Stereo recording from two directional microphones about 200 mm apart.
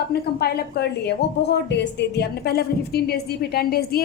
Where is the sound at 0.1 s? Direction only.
50° left (ahead or behind).